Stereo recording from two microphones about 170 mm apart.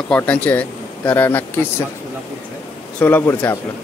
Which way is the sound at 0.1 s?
10° left (ahead or behind).